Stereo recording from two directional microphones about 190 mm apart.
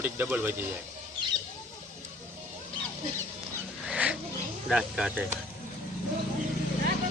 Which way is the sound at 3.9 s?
5° right (ahead or behind).